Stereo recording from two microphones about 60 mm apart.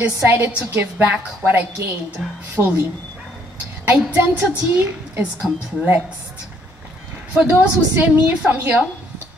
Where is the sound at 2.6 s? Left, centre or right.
Right.